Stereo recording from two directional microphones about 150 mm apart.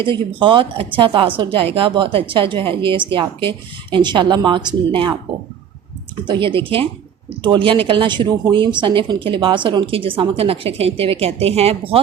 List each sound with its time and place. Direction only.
0.0 s speech: 35° right (ahead or behind)
6.2 s speech: 35° right (ahead or behind)